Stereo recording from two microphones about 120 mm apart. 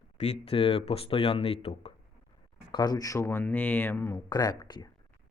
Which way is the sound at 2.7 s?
35° left (ahead or behind).